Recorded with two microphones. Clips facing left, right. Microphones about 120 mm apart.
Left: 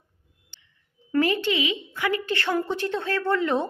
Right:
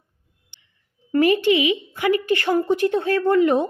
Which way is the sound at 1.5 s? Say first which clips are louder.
Right 7 dB; 60° right (ahead or behind).